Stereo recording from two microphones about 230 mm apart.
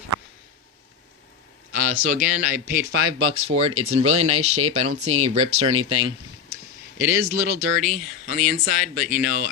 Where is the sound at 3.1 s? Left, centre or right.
Right; by 8.5 s centre.